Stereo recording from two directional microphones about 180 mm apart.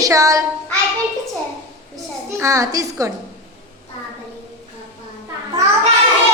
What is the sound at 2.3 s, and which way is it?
Speech, 15° right (ahead or behind).